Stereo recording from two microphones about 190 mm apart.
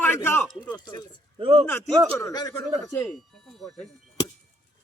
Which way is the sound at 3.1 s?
Centre (ahead or behind).